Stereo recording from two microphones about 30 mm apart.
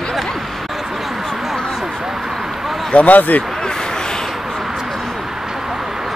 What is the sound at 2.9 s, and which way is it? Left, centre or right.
Speech, left.